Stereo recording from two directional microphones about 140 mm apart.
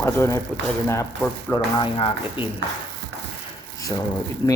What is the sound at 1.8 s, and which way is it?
Speech, 40° left (ahead or behind).